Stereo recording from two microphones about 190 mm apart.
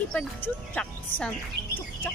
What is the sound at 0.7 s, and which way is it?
Speech, 5° left (ahead or behind).